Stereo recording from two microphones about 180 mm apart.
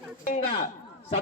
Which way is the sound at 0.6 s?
40° left (ahead or behind).